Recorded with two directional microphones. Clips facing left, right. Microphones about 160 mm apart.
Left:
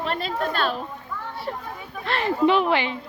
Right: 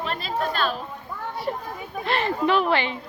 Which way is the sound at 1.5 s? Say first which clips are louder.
Right 3 dB; 15° right (ahead or behind).